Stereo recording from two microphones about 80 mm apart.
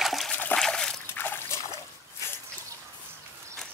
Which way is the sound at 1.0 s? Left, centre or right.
Left.